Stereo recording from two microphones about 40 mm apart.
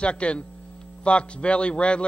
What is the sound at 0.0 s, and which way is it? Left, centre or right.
A man's voice, left.